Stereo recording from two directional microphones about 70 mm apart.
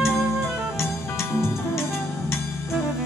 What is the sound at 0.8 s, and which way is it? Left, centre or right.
Music, left.